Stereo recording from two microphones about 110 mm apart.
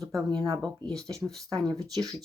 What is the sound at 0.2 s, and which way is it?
Speech, 35° right (ahead or behind).